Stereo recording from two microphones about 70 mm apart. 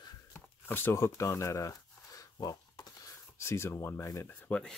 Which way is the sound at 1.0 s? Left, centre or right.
Left.